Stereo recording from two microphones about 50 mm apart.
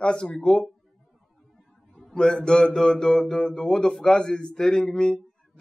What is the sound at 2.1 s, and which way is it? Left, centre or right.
A man's voice, centre.